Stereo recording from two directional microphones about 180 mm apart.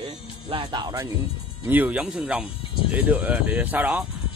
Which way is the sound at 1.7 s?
10° right (ahead or behind).